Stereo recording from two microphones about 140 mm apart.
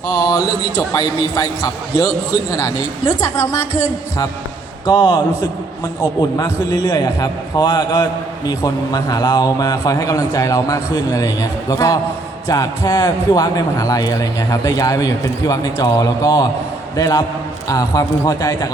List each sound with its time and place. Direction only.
0.1 s a man's voice: 25° left (ahead or behind)
4.9 s a man's voice: 30° left (ahead or behind)